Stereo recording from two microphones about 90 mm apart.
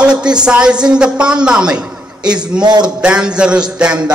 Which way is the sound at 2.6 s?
55° right (ahead or behind).